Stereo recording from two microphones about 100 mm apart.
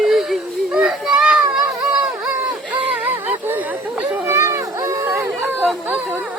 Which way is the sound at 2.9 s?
15° right (ahead or behind).